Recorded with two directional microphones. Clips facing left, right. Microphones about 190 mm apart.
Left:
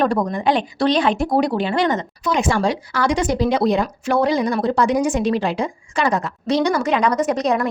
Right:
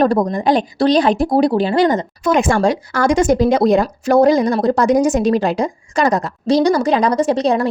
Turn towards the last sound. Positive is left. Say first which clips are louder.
# right 4 dB
turn(degrees=-30)  # may be behind; listen again after turning